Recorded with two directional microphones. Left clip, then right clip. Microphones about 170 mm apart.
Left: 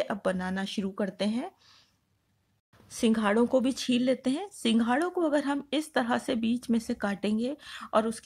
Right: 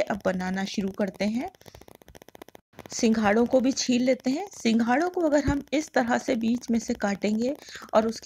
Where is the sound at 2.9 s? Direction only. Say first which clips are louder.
Right 3 dB; 20° right (ahead or behind).